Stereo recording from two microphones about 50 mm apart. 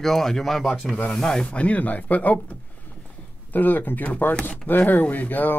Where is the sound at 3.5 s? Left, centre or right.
Left.